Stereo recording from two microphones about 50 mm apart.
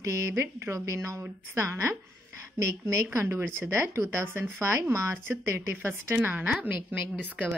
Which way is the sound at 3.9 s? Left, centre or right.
Right.